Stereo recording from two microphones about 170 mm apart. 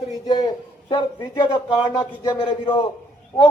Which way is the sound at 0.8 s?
30° left (ahead or behind).